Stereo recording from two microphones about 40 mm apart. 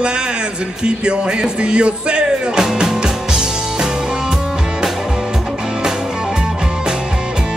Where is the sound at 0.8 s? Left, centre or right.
Right.